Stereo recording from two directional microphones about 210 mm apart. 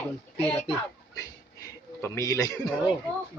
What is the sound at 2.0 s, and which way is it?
Speech, 15° left (ahead or behind).